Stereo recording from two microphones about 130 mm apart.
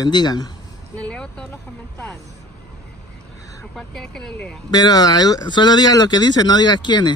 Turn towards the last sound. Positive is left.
turn(degrees=35)  # may be behind; listen again after turning